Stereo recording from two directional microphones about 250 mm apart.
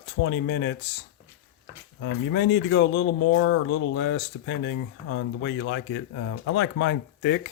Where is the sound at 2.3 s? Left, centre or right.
Left.